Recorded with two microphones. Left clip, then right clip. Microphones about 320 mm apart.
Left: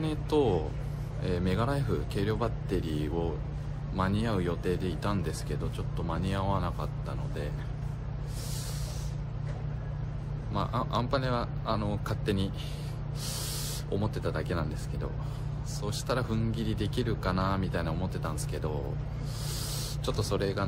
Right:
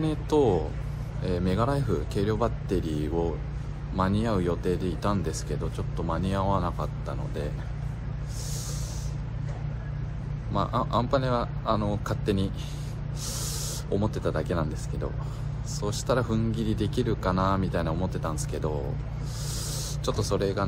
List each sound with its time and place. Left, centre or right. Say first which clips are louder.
0.0 s speech: right 4 dB; centre
10.5 s speech: right 5 dB; centre
13.8 s speech: right 5 dB; centre
20.1 s speech: right 4 dB; centre